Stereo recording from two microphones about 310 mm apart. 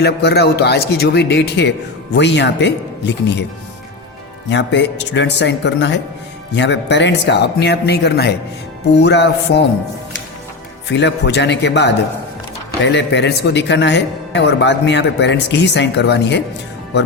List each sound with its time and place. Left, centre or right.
0.0 s speech: left
4.4 s speech: left
10.8 s speech: left